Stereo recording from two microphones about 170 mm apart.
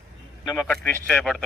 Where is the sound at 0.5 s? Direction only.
5° left (ahead or behind).